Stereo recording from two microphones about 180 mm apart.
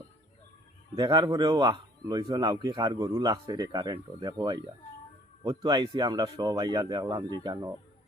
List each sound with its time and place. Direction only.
0.9 s speech: 25° right (ahead or behind)